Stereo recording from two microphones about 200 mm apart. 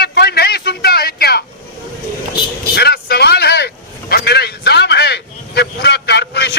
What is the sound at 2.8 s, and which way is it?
Vehicle, 55° left (ahead or behind).